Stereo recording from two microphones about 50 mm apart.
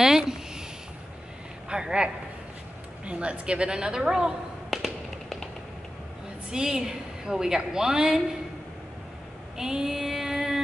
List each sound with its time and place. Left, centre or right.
0.0 s a sound: centre
1.7 s a woman's voice: centre
3.1 s a woman's voice: right
4.6 s tap: centre
6.5 s a woman's voice: centre
9.6 s mantra: centre